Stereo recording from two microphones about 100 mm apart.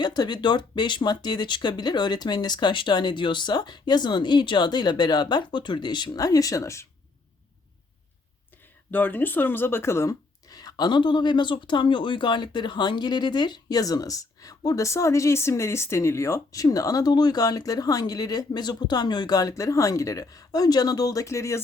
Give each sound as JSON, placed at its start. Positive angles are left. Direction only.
{"t": 0.0, "sound": "speech", "side_deg": 45}
{"t": 8.9, "sound": "speech", "side_deg": 20}